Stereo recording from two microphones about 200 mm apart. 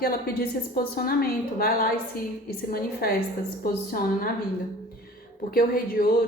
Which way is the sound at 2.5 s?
50° left (ahead or behind).